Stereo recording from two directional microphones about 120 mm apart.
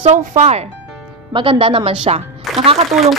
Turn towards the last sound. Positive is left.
turn(degrees=-55)  # may be behind; listen again after turning